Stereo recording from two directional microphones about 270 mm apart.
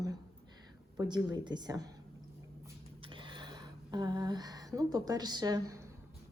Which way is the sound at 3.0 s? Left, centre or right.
Centre.